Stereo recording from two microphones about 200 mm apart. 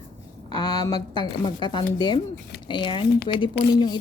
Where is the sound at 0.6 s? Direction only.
20° left (ahead or behind).